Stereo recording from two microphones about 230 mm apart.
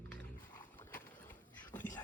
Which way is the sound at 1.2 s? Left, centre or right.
Centre.